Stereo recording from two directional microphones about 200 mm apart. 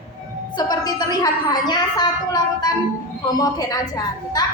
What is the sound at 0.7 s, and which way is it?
A woman's voice, 20° left (ahead or behind).